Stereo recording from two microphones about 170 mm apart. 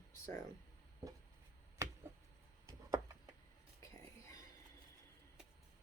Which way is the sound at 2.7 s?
20° right (ahead or behind).